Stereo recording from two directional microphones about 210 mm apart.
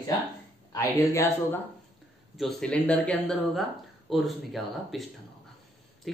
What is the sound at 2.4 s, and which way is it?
Speech, centre (ahead or behind).